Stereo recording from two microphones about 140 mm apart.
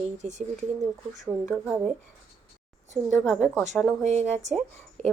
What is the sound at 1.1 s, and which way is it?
Speech, centre (ahead or behind).